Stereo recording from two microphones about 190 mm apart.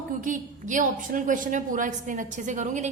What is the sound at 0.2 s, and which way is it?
A woman's voice, 45° right (ahead or behind).